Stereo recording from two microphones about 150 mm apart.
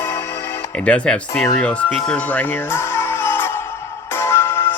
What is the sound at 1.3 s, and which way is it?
Speech, 20° left (ahead or behind).